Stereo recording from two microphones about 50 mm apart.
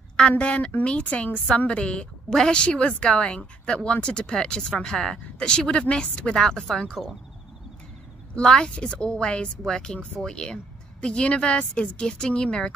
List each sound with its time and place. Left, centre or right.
0.4 s a woman's voice: left
2.3 s a woman's voice: centre
2.6 s speech: left
8.4 s a woman's voice: centre